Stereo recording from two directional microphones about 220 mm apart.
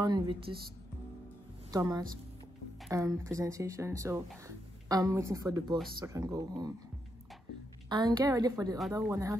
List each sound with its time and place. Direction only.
0.0 s speech: 20° right (ahead or behind)
1.7 s speech: 15° right (ahead or behind)
7.9 s speech: 15° right (ahead or behind)